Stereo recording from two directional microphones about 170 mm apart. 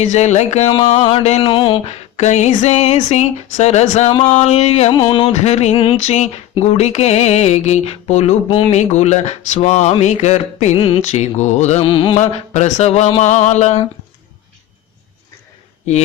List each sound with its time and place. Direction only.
0.0 s mantra: 40° left (ahead or behind)
4.9 s mantra: 25° left (ahead or behind)
5.3 s mantra: 40° left (ahead or behind)
11.8 s mantra: 30° left (ahead or behind)
12.2 s mantra: 45° left (ahead or behind)